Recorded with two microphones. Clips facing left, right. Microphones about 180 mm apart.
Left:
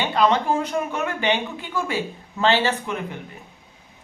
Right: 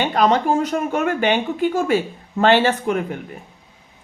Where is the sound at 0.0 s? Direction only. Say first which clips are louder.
Right 3 dB; 45° right (ahead or behind).